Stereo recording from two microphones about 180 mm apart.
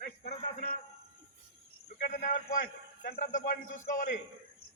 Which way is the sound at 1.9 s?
55° left (ahead or behind).